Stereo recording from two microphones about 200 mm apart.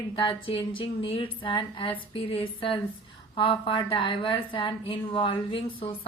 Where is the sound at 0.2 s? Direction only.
25° left (ahead or behind).